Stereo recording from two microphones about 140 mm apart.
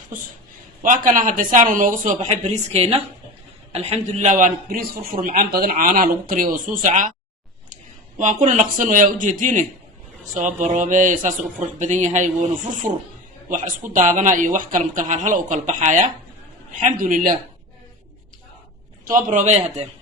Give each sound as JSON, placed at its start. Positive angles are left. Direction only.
{"t": 0.8, "sound": "speech", "side_deg": -70}
{"t": 8.2, "sound": "speech", "side_deg": -60}
{"t": 13.9, "sound": "speech", "side_deg": -65}
{"t": 19.0, "sound": "speech", "side_deg": -70}